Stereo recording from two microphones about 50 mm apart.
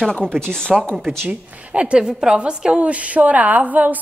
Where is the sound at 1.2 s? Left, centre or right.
Right.